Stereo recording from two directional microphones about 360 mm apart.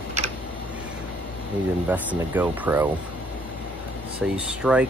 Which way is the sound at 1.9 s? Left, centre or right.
Centre.